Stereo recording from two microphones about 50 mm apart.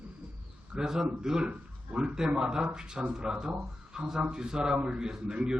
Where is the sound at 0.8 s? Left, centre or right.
Centre.